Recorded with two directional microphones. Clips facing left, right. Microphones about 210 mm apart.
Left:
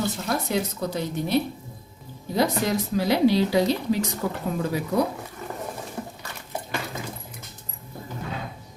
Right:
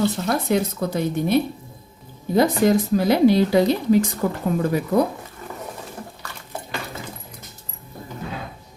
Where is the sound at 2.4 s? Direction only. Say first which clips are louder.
Right 6 dB; 50° right (ahead or behind).